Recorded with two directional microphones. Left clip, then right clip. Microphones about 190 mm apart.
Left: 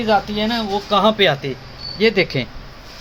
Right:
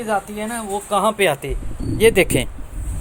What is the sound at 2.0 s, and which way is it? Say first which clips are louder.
Speech: right 2 dB; 55° right (ahead or behind).